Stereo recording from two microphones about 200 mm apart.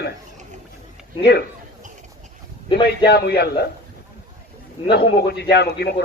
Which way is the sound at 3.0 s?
55° left (ahead or behind).